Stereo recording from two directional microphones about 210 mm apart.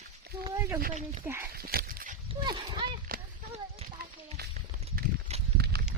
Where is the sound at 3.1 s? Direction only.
45° right (ahead or behind).